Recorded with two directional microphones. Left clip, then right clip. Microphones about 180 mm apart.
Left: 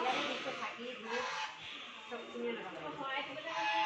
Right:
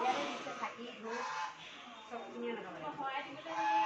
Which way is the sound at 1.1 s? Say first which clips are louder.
Left 1 dB; 15° right (ahead or behind).